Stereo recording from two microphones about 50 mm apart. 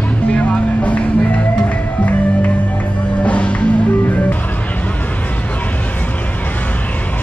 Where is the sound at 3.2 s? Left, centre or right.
Left.